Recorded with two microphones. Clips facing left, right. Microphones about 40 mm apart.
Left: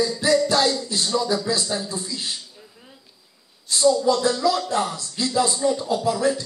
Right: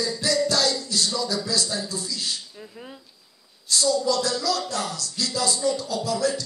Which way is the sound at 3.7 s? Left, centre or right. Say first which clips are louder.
Left 4 dB; left.